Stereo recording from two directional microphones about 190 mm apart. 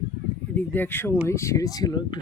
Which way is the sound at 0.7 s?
10° left (ahead or behind).